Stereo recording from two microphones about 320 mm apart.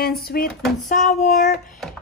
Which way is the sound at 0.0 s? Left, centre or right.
Left.